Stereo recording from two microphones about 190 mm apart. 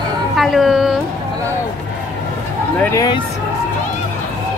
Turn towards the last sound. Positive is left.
turn(degrees=20)  # may be behind; listen again after turning